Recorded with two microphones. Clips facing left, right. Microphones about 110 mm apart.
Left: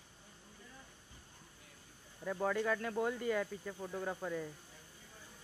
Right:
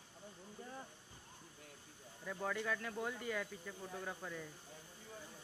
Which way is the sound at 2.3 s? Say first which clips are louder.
Left 6 dB; 55° left (ahead or behind).